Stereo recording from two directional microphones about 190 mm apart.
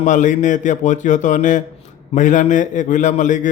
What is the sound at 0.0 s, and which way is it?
A man's voice, 40° left (ahead or behind).